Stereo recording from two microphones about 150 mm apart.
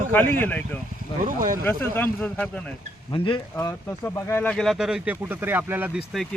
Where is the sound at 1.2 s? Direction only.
65° right (ahead or behind).